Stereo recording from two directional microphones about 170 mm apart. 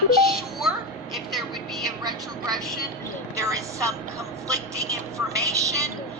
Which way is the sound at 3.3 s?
20° right (ahead or behind).